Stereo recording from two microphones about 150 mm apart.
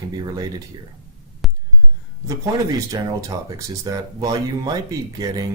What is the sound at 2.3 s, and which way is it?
Speech, 25° right (ahead or behind).